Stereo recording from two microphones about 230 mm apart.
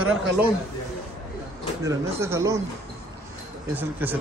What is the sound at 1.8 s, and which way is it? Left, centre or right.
Speech, centre.